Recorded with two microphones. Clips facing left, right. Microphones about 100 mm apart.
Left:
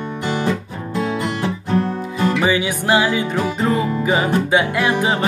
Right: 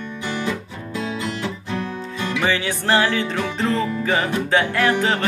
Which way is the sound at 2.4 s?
15° left (ahead or behind).